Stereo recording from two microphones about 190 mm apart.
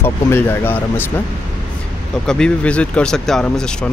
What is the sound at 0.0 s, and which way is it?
Speech, 10° left (ahead or behind).